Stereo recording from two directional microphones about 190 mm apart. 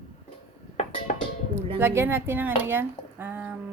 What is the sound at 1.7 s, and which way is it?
Speech, 10° right (ahead or behind).